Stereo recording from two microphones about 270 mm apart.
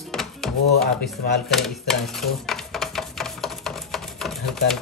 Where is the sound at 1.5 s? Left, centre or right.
Centre.